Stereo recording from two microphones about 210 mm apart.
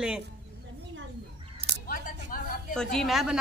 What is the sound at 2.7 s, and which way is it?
Speech, centre (ahead or behind).